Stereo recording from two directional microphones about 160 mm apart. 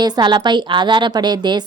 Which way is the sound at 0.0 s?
25° right (ahead or behind).